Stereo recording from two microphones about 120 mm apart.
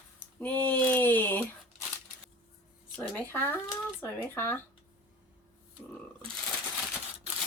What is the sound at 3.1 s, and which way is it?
Speech, 20° left (ahead or behind).